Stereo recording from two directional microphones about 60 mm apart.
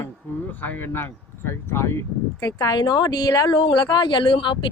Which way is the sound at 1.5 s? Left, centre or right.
Left.